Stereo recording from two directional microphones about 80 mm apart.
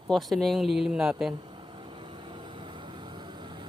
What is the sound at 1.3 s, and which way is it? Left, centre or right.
Vehicle, right.